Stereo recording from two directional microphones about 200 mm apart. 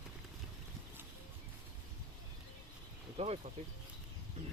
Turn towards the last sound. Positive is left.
turn(degrees=-30)  # may be behind; listen again after turning